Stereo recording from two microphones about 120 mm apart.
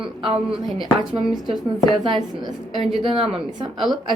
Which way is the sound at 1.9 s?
40° right (ahead or behind).